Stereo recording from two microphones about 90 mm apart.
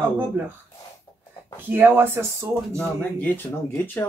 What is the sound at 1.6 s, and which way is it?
Speech, 20° right (ahead or behind).